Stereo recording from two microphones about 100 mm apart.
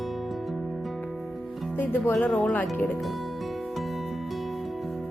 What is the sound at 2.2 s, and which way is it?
Speech, 15° left (ahead or behind).